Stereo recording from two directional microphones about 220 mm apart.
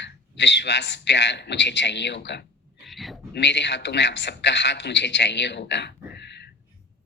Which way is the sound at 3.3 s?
50° left (ahead or behind).